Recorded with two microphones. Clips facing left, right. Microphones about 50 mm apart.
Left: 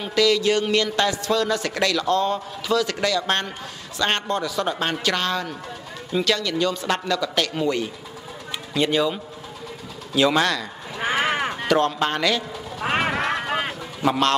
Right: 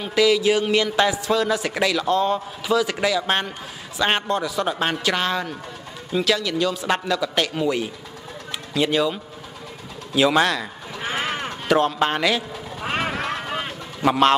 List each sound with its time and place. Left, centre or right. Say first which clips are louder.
0.0 s a man's voice: right 1 dB; centre
11.0 s a sound: left 4 dB; left
11.6 s a man's voice: right 3 dB; centre
12.9 s vehicle: left 3 dB; left